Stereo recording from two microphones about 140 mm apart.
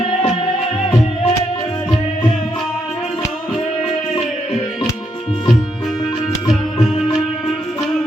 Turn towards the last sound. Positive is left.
turn(degrees=0)  # may be behind; listen again after turning